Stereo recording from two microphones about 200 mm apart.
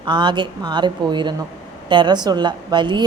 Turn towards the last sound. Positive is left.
turn(degrees=-20)  # may be behind; listen again after turning